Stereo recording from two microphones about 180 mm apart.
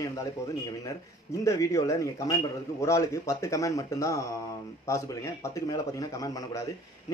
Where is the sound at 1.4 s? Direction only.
15° left (ahead or behind).